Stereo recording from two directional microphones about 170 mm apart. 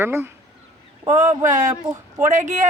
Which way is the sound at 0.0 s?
15° right (ahead or behind).